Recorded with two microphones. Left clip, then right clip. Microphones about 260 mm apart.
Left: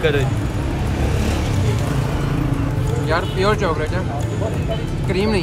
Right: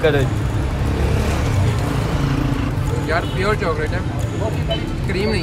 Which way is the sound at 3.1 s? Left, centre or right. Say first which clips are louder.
Left 1 dB; centre.